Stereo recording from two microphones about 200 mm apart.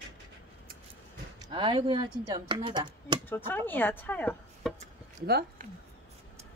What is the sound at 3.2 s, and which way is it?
Speech, 10° left (ahead or behind).